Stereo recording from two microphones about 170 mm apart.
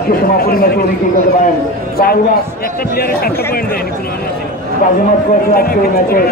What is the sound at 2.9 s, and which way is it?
Speech, 60° left (ahead or behind).